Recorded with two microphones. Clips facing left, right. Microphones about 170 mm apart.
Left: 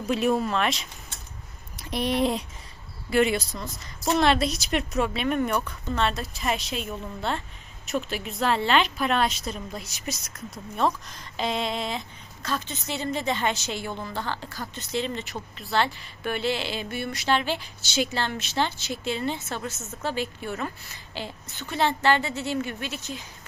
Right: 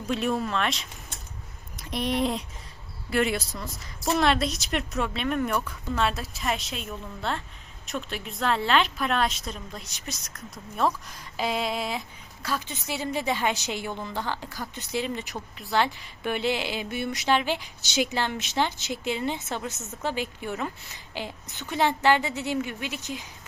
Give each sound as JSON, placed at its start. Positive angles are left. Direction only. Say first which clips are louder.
{"t": 0.1, "sound": "a woman's voice", "louder": "left 3 dB", "side_deg": 5}